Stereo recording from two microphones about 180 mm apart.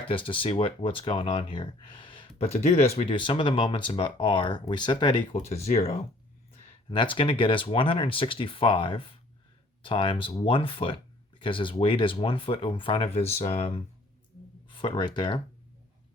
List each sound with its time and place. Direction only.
0.1 s speech: 30° left (ahead or behind)